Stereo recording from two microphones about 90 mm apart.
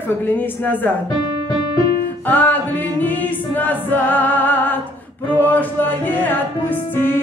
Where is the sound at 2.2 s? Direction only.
20° left (ahead or behind).